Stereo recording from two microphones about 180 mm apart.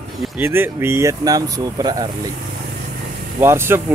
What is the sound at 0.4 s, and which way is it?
Speech, 15° right (ahead or behind).